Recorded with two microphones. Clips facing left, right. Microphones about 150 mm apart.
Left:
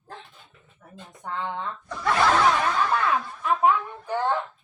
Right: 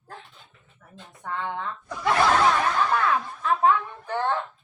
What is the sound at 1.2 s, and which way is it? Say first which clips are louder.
Speech: even; 20° left (ahead or behind).